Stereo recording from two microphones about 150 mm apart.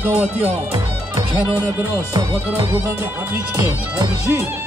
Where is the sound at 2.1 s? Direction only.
20° right (ahead or behind).